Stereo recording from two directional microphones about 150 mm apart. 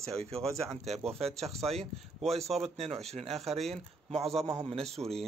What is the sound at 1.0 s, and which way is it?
Speech, 45° right (ahead or behind).